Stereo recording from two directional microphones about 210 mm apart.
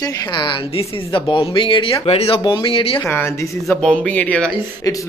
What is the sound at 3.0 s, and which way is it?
Speech, 10° left (ahead or behind).